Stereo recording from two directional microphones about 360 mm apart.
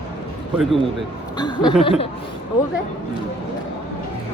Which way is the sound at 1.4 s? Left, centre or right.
Centre.